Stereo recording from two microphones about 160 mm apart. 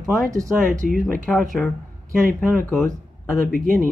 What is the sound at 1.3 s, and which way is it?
Speech, centre (ahead or behind).